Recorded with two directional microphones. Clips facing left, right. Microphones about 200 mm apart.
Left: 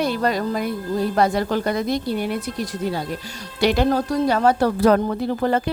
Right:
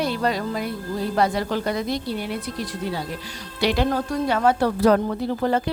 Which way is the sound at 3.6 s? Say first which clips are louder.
Left 3 dB; 45° left (ahead or behind).